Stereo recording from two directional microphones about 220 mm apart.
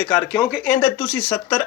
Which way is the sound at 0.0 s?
5° left (ahead or behind).